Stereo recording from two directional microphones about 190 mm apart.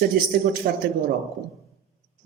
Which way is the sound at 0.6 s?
50° right (ahead or behind).